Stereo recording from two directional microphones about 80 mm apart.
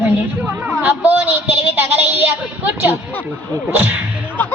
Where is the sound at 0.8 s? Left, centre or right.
Right.